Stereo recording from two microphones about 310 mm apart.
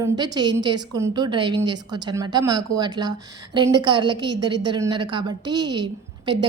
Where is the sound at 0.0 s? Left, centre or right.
Centre.